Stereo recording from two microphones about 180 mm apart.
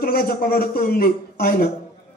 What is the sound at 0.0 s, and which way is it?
A man's voice, 55° left (ahead or behind).